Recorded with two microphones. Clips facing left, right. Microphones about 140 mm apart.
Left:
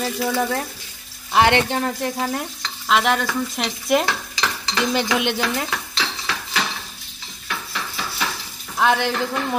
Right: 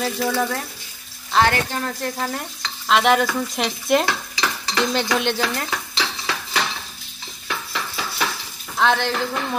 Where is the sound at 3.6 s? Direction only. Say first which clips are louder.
Right 1 dB; 5° left (ahead or behind).